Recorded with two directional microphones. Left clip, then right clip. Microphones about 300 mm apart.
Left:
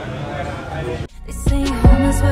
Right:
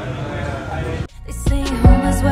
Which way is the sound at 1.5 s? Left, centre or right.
Centre.